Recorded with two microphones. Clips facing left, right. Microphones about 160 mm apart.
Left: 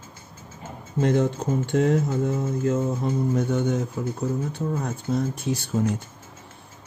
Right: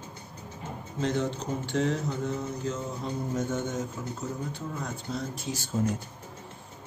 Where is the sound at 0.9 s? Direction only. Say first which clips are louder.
Left 7 dB; 55° left (ahead or behind).